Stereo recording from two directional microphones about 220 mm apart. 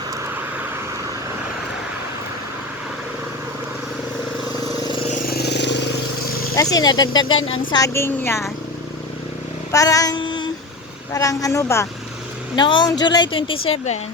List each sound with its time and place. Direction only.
5.1 s vehicle: 45° left (ahead or behind)
6.6 s a woman's voice: 15° left (ahead or behind)
9.7 s child singing: 15° left (ahead or behind)
11.1 s a woman's voice: 15° left (ahead or behind); by 14.0 s 30° left (ahead or behind)